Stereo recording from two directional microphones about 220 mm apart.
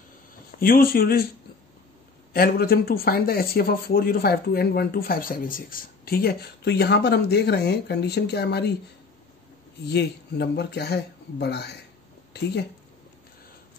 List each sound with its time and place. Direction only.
0.6 s speech: 40° left (ahead or behind)
2.3 s speech: 45° left (ahead or behind)
9.8 s speech: 50° left (ahead or behind)